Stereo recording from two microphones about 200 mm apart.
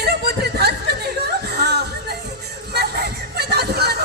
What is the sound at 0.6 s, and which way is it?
Chuckle, 55° right (ahead or behind).